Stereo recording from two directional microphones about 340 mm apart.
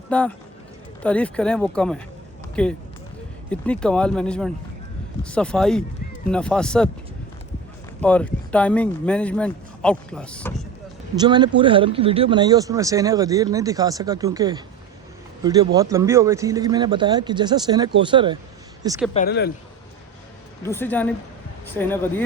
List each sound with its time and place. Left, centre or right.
0.1 s speech: centre
8.0 s speech: centre
11.1 s speech: centre
18.8 s a sound: centre
19.1 s speech: left
20.6 s speech: centre